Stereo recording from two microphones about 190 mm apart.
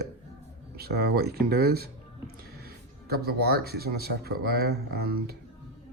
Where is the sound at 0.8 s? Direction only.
55° right (ahead or behind).